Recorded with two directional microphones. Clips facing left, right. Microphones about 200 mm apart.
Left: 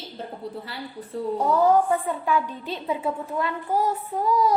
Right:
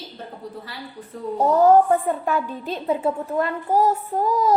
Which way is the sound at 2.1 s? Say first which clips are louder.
Right 2 dB; 45° right (ahead or behind).